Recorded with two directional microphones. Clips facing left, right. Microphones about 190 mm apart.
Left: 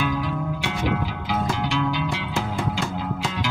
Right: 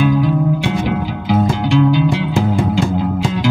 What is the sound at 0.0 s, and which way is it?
Music, 30° right (ahead or behind).